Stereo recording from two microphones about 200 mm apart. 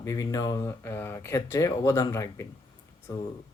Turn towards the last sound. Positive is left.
turn(degrees=15)  # may be behind; listen again after turning